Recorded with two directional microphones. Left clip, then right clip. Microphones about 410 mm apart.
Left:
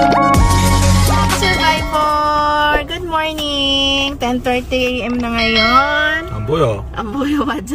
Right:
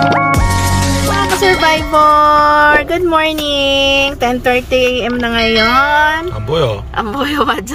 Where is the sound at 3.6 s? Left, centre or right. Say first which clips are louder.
Right 4 dB; centre.